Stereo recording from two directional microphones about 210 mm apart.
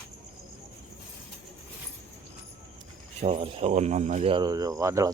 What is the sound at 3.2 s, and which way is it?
Speech, 30° right (ahead or behind).